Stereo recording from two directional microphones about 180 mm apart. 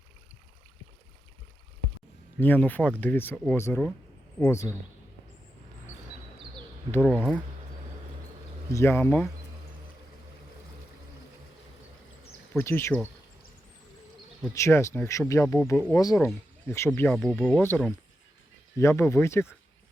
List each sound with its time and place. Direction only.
2.4 s speech: 10° left (ahead or behind)
7.0 s speech: 5° right (ahead or behind)
8.7 s speech: 15° left (ahead or behind)
12.5 s speech: 15° left (ahead or behind)
14.5 s speech: 15° left (ahead or behind)
17.1 s speech: centre (ahead or behind)